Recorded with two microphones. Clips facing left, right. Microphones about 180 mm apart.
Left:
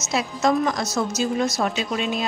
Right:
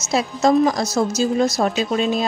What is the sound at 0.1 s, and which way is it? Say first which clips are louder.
A woman's voice: right 5 dB; 35° right (ahead or behind).